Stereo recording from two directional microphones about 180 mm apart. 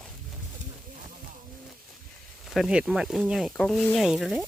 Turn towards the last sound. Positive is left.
turn(degrees=0)  # may be behind; listen again after turning